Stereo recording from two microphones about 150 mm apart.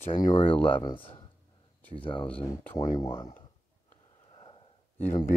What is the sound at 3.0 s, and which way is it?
Speech, 20° left (ahead or behind).